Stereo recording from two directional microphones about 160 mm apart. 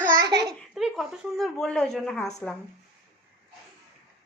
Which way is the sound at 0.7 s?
Centre (ahead or behind).